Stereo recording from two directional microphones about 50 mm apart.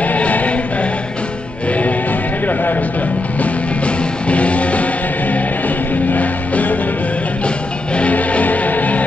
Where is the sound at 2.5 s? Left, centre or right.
Left.